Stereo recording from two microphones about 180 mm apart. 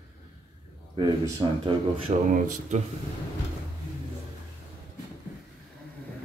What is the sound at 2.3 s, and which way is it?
Speech, 45° right (ahead or behind).